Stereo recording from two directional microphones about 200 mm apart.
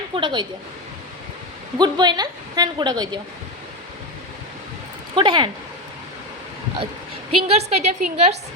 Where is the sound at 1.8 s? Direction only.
20° right (ahead or behind).